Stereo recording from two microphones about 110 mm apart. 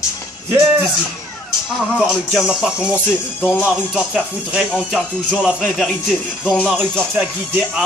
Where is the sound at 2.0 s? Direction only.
5° right (ahead or behind).